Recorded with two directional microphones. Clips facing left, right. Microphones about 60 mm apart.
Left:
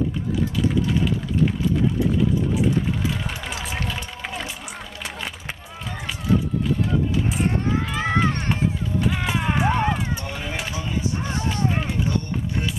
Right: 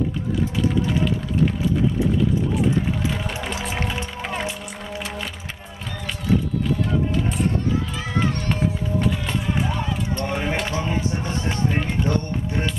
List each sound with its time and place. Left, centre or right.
3.4 s music: centre
7.9 s run: left
9.4 s a sound: left
9.7 s run: left
10.2 s a sound: right
10.7 s chop: right